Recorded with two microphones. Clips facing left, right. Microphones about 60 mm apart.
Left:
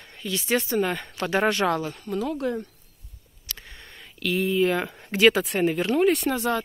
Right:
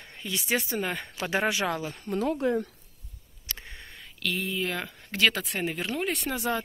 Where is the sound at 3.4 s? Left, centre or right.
Right.